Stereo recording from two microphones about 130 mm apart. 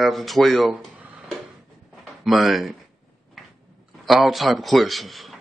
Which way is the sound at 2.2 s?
Centre (ahead or behind).